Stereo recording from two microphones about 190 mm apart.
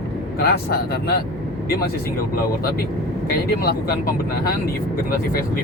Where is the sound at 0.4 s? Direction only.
55° left (ahead or behind).